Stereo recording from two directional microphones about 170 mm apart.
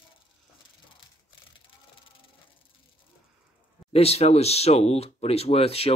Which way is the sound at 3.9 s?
40° left (ahead or behind).